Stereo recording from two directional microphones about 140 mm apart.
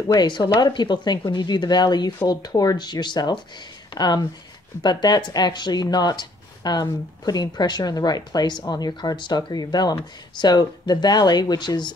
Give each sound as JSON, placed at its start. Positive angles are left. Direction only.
{"t": 0.1, "sound": "speech", "side_deg": 30}